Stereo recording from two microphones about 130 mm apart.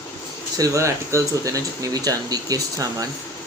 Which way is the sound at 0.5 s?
25° right (ahead or behind).